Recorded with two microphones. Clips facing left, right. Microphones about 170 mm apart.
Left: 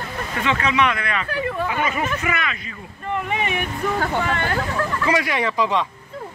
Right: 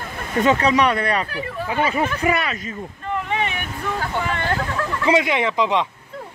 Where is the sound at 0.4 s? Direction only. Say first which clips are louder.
Right 4 dB; 40° right (ahead or behind).